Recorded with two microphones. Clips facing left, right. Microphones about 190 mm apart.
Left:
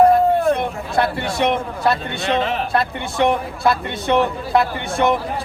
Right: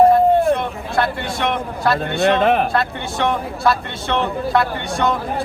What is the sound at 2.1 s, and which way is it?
Speech, 55° right (ahead or behind).